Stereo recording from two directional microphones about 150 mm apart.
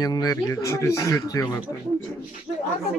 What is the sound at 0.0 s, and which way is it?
Speech, 25° left (ahead or behind).